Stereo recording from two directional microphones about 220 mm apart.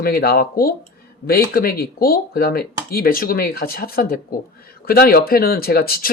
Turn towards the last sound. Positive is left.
turn(degrees=45)  # may be behind; listen again after turning